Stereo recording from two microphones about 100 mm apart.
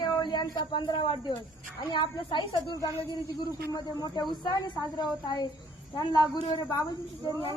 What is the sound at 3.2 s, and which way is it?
Speech, 35° left (ahead or behind).